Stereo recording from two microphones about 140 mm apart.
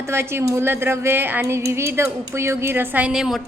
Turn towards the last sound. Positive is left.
turn(degrees=-5)  # may be behind; listen again after turning